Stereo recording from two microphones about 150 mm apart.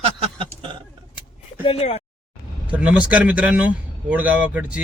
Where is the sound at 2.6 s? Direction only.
10° right (ahead or behind).